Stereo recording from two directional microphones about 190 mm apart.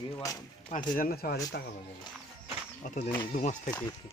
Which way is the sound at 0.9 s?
50° left (ahead or behind).